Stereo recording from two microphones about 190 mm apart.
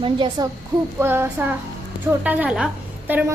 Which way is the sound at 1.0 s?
10° right (ahead or behind).